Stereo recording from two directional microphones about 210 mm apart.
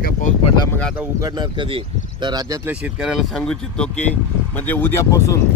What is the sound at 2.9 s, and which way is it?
Speech, centre (ahead or behind).